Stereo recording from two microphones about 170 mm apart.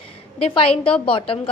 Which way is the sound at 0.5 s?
30° left (ahead or behind).